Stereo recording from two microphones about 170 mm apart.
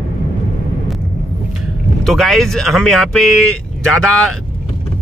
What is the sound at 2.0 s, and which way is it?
Speech, centre (ahead or behind).